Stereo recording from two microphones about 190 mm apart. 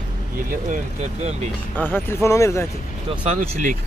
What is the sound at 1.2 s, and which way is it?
Speech, 35° right (ahead or behind).